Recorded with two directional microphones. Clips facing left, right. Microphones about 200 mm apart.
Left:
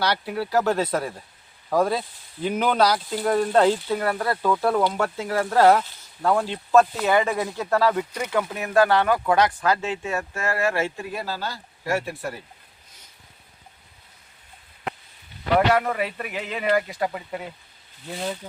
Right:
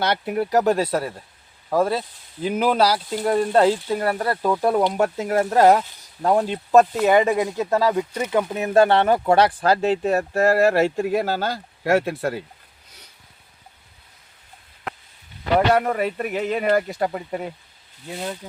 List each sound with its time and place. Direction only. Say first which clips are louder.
0.3 s speech: right 4 dB; 15° right (ahead or behind); by 11.6 s 50° right (ahead or behind)
11.8 s speech: right 7 dB; 65° right (ahead or behind)
15.7 s speech: right 3 dB; 40° right (ahead or behind)
18.1 s speech: even; centre (ahead or behind)